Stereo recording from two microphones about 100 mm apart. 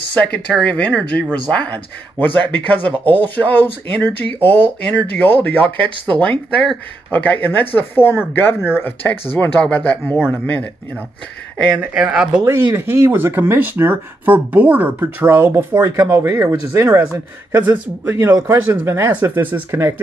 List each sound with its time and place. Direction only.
0.1 s speech: 15° left (ahead or behind)
7.1 s speech: 15° left (ahead or behind)
11.8 s speech: 10° right (ahead or behind)
12.4 s speech: 30° right (ahead or behind)